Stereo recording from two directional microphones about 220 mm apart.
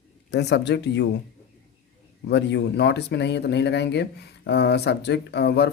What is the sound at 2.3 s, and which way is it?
Speech, 50° left (ahead or behind).